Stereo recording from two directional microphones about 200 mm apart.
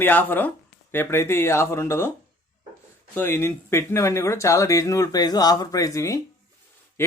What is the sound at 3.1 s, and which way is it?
Speech, 10° left (ahead or behind).